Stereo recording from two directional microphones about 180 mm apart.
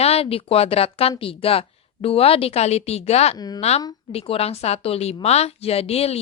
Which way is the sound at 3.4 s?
20° left (ahead or behind).